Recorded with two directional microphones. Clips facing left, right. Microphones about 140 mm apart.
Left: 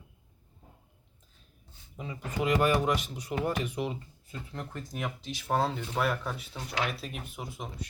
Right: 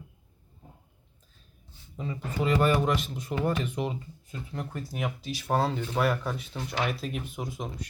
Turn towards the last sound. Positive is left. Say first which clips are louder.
# right 4 dB
turn(degrees=5)  # may be behind; listen again after turning